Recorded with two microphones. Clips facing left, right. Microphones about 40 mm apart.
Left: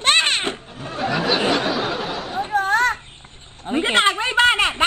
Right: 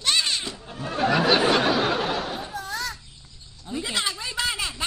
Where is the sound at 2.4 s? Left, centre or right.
Left.